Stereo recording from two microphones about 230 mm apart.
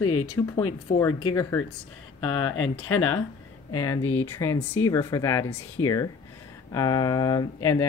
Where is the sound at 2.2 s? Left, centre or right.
Left.